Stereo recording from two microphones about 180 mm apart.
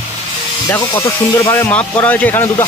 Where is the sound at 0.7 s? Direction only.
20° left (ahead or behind).